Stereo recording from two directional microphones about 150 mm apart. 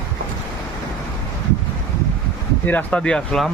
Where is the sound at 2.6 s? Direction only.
10° left (ahead or behind).